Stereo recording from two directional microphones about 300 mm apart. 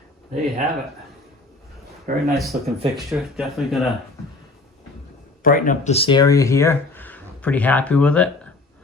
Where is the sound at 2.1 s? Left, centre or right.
Right.